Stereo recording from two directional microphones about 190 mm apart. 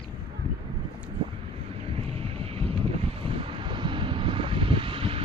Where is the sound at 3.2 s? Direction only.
30° right (ahead or behind).